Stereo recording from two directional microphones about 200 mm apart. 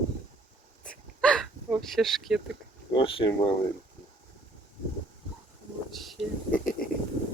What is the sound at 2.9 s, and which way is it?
Speech, 25° left (ahead or behind).